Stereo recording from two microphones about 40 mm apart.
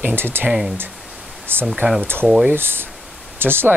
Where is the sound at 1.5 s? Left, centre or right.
Right.